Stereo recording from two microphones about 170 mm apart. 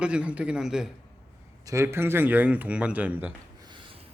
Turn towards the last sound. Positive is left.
turn(degrees=-30)  # may be behind; listen again after turning